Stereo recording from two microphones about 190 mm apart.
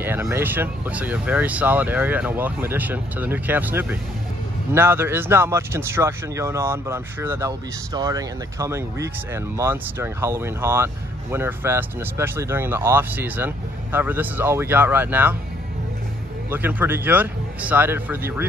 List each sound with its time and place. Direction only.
0.0 s speech: 10° right (ahead or behind)
16.4 s speech: 10° right (ahead or behind)